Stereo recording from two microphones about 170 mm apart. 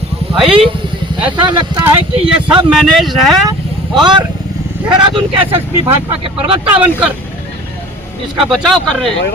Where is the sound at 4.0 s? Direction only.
25° right (ahead or behind).